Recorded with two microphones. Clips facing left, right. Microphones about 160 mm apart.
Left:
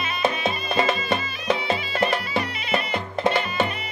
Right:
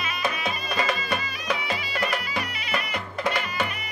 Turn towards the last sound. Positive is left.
turn(degrees=25)  # may be behind; listen again after turning